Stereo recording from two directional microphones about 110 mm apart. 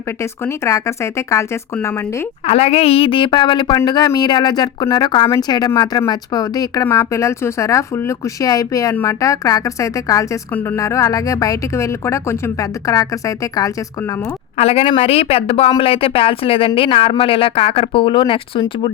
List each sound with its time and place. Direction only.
0.2 s a woman's voice: 25° left (ahead or behind)
2.5 s a woman's voice: 70° left (ahead or behind); by 13.7 s 30° left (ahead or behind)
14.6 s speech: 65° left (ahead or behind); by 18.9 s 50° left (ahead or behind)